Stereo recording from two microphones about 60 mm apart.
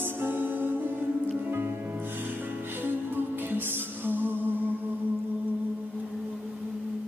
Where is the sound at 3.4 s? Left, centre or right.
Right.